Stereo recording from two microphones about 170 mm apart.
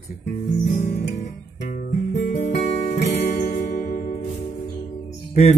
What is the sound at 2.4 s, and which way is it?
Guitar, 60° left (ahead or behind).